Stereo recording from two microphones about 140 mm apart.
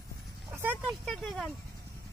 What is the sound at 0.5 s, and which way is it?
Vehicle, 15° right (ahead or behind).